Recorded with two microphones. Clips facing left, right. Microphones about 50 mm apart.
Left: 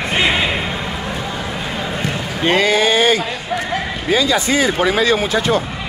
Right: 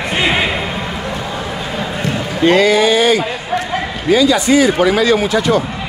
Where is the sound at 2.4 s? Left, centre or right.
Left.